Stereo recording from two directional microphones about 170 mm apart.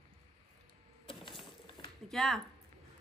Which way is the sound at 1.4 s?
30° left (ahead or behind).